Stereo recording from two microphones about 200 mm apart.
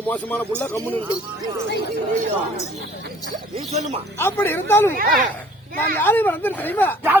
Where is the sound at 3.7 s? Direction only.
35° right (ahead or behind).